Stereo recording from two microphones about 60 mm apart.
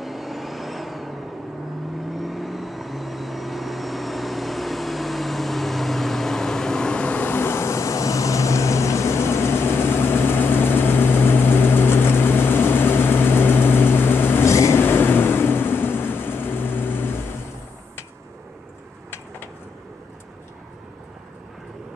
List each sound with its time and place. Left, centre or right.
0.0 s vehicle: centre; by 7.2 s left
7.2 s vehicle: left
14.4 s vehicle: left
14.8 s vehicle: left